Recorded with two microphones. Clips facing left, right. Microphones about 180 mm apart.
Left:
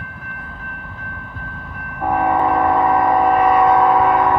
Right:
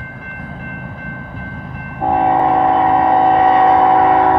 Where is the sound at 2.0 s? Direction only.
25° right (ahead or behind).